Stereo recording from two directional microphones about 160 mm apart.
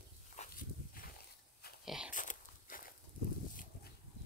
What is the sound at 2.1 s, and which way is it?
Biting, 55° left (ahead or behind).